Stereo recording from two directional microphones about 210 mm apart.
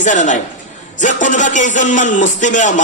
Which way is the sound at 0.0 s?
35° left (ahead or behind).